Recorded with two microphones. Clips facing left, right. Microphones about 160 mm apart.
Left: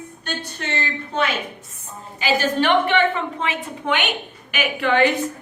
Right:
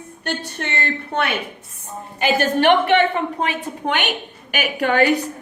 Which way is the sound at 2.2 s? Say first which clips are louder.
Right 2 dB; 60° right (ahead or behind).